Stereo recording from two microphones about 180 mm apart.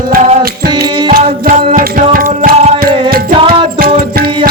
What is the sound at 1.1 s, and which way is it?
Music, 55° right (ahead or behind).